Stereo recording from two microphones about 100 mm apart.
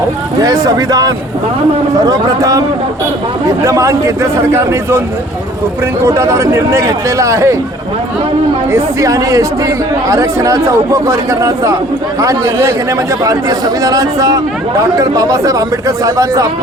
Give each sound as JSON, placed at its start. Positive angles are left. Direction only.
{"t": 0.3, "sound": "speech", "side_deg": -35}
{"t": 6.1, "sound": "speech", "side_deg": -30}
{"t": 8.7, "sound": "speech", "side_deg": -35}